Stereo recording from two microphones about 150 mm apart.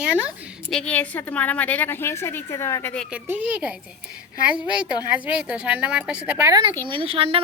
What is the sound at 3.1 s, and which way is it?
A woman's voice, 10° right (ahead or behind).